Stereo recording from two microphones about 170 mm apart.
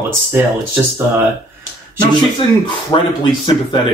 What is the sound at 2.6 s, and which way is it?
Speech, 30° left (ahead or behind).